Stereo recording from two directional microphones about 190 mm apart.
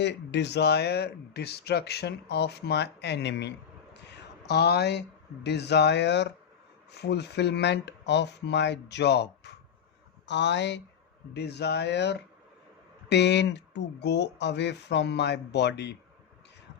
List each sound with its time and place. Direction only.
0.0 s speech: 65° left (ahead or behind)